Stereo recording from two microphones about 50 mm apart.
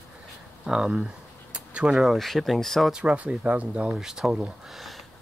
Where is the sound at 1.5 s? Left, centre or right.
Centre.